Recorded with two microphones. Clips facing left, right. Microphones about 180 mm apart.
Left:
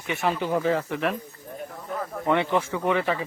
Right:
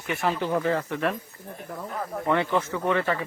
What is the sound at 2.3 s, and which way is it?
Speech, 15° left (ahead or behind).